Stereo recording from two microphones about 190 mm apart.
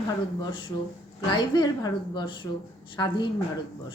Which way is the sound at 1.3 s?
20° left (ahead or behind).